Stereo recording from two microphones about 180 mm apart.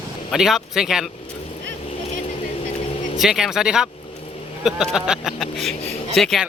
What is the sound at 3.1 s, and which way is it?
A man's voice, centre (ahead or behind).